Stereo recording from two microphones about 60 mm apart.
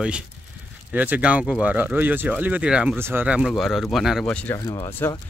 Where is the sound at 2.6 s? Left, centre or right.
Centre.